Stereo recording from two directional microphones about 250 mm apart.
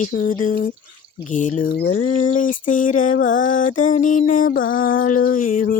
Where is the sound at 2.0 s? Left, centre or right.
Left.